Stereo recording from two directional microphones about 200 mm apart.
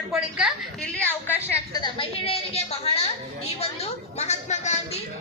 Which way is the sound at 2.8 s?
30° left (ahead or behind).